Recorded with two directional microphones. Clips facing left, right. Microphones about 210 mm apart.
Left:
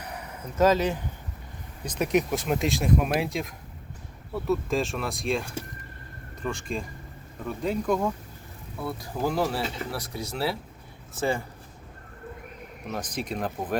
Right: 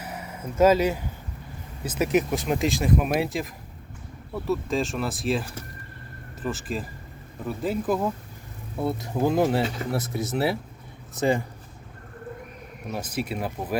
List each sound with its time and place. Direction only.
0.0 s a sound: 5° right (ahead or behind)
1.8 s speech: 5° right (ahead or behind)
8.8 s speech: 25° right (ahead or behind)
12.9 s speech: 10° right (ahead or behind)